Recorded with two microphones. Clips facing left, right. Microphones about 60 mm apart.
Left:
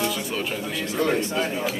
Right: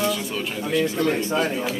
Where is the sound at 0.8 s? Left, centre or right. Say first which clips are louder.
Right 2 dB; centre.